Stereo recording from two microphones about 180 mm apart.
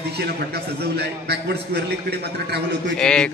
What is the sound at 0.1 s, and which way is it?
A man's voice, 65° right (ahead or behind).